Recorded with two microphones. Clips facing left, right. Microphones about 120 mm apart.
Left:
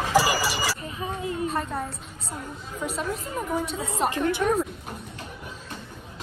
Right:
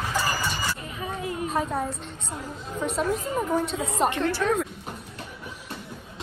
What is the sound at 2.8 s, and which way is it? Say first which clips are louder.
A woman's voice: right 4 dB; centre (ahead or behind).